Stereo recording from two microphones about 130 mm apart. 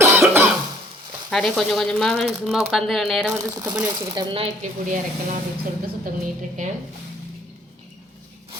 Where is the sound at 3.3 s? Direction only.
25° right (ahead or behind).